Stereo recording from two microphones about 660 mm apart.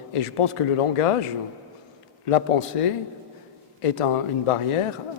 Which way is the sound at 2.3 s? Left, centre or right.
Left.